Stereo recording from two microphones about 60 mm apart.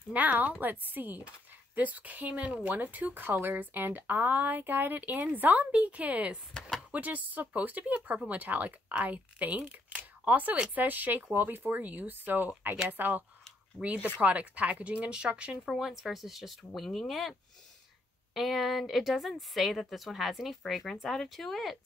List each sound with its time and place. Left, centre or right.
0.1 s speech: right
13.7 s speech: right
15.7 s speech: centre